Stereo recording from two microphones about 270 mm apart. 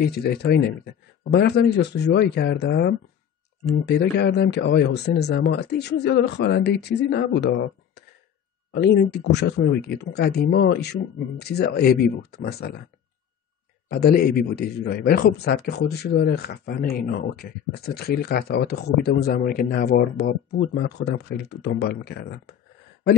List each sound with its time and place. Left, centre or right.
0.0 s speech: left
13.8 s speech: left